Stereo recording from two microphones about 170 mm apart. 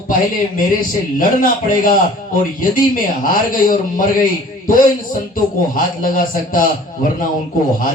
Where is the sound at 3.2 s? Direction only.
55° left (ahead or behind).